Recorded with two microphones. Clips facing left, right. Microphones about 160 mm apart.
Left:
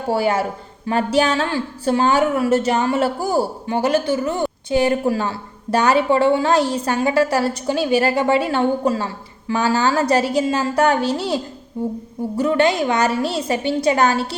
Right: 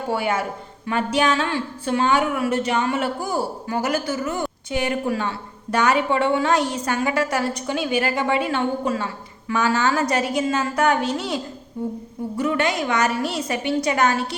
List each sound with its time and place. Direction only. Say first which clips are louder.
0.1 s a woman's voice: left 5 dB; 35° left (ahead or behind)
12.4 s a woman's voice: left 5 dB; 30° left (ahead or behind)